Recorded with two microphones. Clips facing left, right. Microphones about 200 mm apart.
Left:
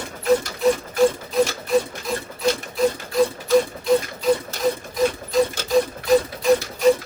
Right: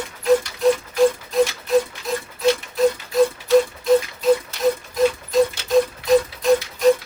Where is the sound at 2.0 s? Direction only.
Centre (ahead or behind).